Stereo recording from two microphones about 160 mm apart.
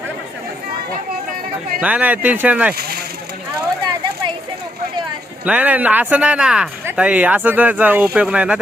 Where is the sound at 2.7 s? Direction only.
80° right.